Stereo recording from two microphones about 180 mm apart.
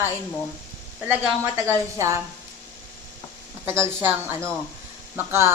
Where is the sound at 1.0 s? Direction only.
10° right (ahead or behind).